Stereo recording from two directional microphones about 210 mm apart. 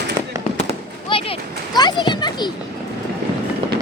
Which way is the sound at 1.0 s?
25° left (ahead or behind).